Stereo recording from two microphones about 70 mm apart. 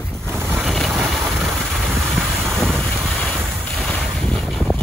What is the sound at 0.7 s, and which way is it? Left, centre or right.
Vehicle, centre.